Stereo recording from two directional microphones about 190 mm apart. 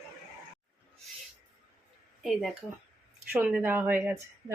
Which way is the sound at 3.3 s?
5° right (ahead or behind).